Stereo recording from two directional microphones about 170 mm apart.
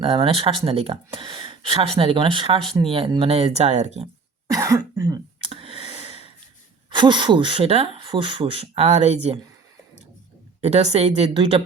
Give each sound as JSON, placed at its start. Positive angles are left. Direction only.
{"t": 0.0, "sound": "speech", "side_deg": -35}
{"t": 4.4, "sound": "cough", "side_deg": -20}
{"t": 6.9, "sound": "speech", "side_deg": -30}
{"t": 10.6, "sound": "speech", "side_deg": -40}